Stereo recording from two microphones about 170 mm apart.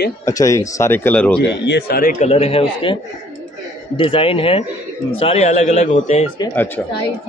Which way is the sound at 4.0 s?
30° left (ahead or behind).